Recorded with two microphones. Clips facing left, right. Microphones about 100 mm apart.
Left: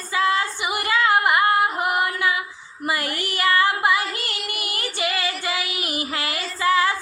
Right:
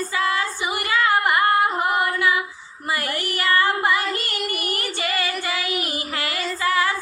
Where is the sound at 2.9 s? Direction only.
20° left (ahead or behind).